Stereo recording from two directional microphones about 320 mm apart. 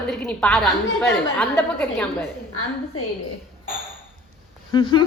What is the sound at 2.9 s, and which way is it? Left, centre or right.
Speech, left.